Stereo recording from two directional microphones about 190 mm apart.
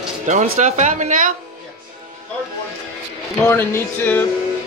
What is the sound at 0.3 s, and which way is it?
Speech, 40° right (ahead or behind).